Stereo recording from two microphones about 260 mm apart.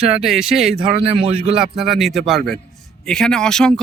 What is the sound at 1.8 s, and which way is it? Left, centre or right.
Speech, centre.